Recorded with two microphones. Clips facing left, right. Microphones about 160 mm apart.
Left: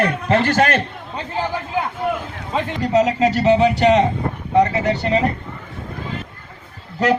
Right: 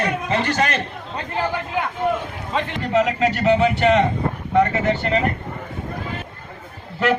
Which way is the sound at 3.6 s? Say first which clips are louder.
Left 2 dB; 35° left (ahead or behind).